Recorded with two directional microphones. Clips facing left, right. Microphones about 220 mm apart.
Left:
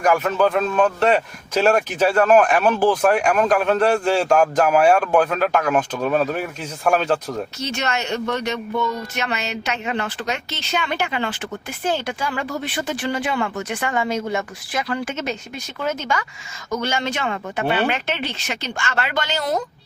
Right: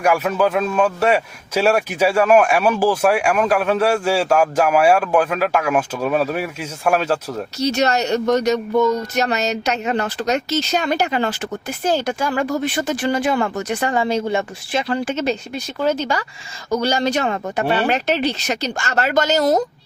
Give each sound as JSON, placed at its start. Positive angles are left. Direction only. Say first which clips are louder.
{"t": 0.0, "sound": "speech", "louder": "right 1 dB", "side_deg": -10}
{"t": 7.6, "sound": "a woman's voice", "louder": "right 11 dB", "side_deg": -40}